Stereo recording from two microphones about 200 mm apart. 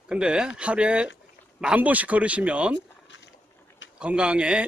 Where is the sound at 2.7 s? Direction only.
60° left (ahead or behind).